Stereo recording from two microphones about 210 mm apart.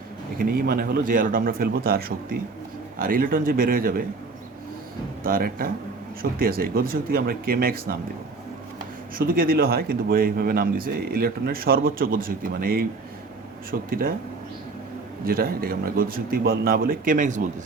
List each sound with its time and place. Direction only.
0.3 s speech: 45° right (ahead or behind)
5.2 s speech: 45° right (ahead or behind)
9.1 s speech: 45° right (ahead or behind)
15.3 s speech: 45° right (ahead or behind)